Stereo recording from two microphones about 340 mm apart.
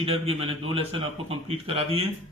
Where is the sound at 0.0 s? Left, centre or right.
Centre.